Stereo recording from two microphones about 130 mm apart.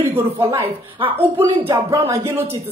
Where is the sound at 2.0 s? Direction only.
15° right (ahead or behind).